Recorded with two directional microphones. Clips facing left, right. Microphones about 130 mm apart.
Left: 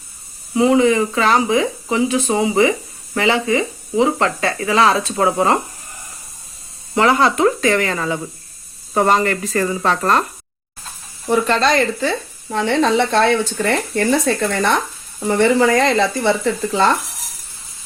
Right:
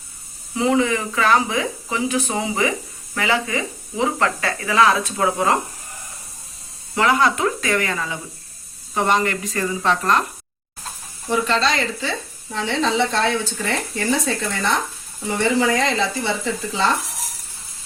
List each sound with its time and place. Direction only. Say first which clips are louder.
0.5 s speech: left 5 dB; 20° left (ahead or behind)
6.9 s speech: left 3 dB; 30° left (ahead or behind)
11.3 s speech: left 4 dB; 55° left (ahead or behind)